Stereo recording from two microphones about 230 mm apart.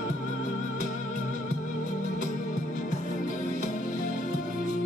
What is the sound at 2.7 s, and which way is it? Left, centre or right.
Music, left.